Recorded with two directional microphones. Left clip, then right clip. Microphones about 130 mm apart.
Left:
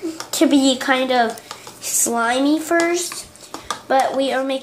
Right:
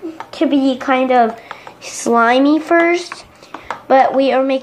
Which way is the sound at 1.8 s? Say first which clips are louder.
Right 7 dB; 35° right (ahead or behind).